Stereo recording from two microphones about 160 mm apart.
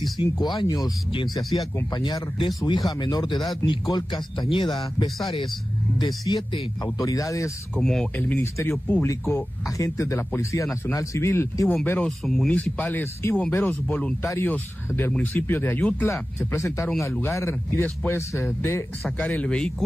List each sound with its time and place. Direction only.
0.2 s speech: 30° left (ahead or behind)
5.9 s speech: 25° left (ahead or behind)
7.7 s a man's voice: 5° left (ahead or behind)